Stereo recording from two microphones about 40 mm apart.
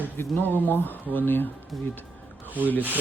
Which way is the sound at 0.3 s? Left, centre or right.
Left.